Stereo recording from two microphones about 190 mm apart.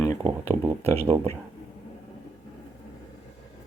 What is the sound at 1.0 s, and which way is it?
Speech, 30° right (ahead or behind).